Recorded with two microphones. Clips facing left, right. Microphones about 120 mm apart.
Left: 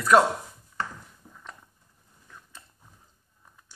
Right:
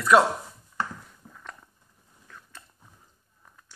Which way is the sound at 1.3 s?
15° left (ahead or behind).